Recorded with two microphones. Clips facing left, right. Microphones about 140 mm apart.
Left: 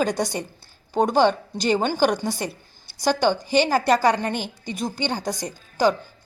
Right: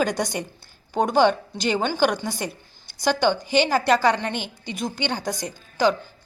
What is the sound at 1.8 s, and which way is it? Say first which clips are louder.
A woman's voice: left 1 dB; 40° left (ahead or behind).